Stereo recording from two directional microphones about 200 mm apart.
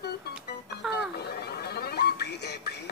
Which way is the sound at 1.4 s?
55° left (ahead or behind).